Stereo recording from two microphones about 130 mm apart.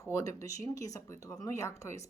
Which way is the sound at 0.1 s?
25° left (ahead or behind).